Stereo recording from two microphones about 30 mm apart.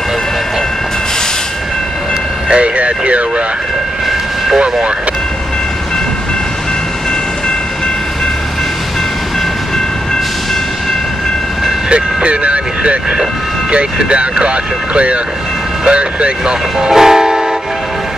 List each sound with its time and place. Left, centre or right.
2.5 s speech: right
11.9 s speech: right
16.9 s train: centre